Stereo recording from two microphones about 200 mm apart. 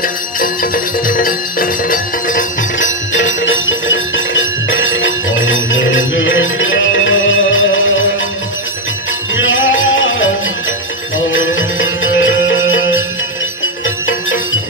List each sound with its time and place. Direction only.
0.0 s music: 45° left (ahead or behind)
3.1 s bell: 70° left (ahead or behind)
9.3 s music: 70° left (ahead or behind)